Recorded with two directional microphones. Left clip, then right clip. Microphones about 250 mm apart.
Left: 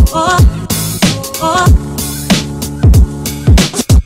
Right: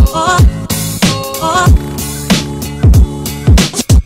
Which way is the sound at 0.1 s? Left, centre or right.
Centre.